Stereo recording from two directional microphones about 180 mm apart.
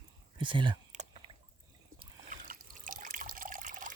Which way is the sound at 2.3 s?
45° right (ahead or behind).